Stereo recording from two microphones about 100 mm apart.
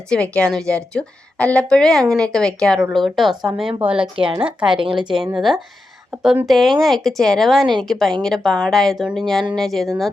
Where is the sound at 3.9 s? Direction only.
60° right (ahead or behind).